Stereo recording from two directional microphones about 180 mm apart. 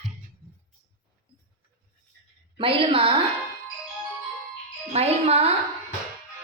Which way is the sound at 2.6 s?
30° right (ahead or behind).